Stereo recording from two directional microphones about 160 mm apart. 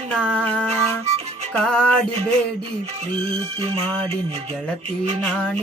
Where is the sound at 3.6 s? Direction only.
40° right (ahead or behind).